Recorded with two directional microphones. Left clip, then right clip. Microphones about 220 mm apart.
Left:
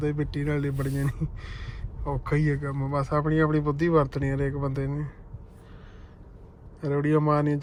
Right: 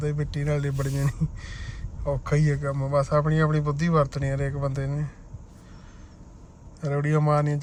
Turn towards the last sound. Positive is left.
turn(degrees=0)  # may be behind; listen again after turning